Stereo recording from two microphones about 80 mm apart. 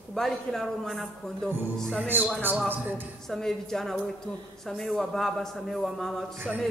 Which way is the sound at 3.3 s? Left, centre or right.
Centre.